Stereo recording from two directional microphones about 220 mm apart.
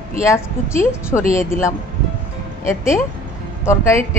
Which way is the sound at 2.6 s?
10° left (ahead or behind).